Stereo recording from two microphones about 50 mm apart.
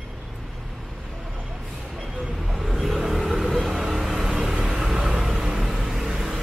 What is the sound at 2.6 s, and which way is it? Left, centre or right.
Vehicle, centre.